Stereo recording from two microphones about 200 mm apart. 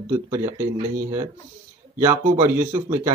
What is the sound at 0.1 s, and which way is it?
Speech, 20° right (ahead or behind).